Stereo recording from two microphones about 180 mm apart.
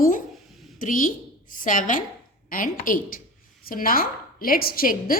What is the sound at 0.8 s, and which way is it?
A woman's voice, 50° left (ahead or behind).